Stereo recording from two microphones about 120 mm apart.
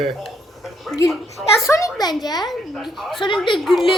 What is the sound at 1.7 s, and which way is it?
Speech, 25° left (ahead or behind).